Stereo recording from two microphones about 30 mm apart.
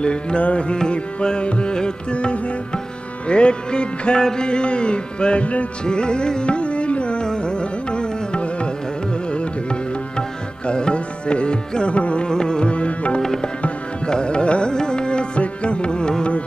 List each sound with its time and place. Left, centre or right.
0.0 s music: left
0.7 s music: left
2.1 s music: left
4.2 s music: left
4.5 s music: left
5.9 s music: left
12.3 s music: left
14.0 s music: left
15.4 s carnatic music: left